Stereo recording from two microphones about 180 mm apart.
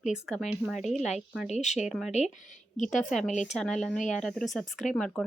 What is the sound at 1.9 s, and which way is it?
Speech, centre (ahead or behind).